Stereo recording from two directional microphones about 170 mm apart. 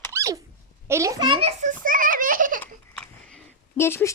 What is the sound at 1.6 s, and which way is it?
A child's voice, 50° right (ahead or behind).